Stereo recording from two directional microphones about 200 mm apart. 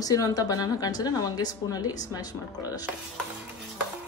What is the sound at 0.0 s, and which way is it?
Speech, 15° left (ahead or behind).